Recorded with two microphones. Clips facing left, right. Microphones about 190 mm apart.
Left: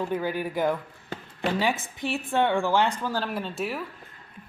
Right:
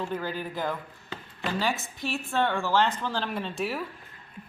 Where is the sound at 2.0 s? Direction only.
15° left (ahead or behind).